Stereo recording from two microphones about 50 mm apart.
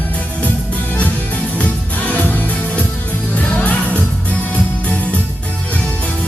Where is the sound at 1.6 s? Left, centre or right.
Left.